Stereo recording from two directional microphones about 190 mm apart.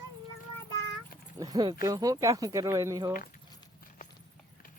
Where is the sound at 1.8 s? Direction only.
20° right (ahead or behind).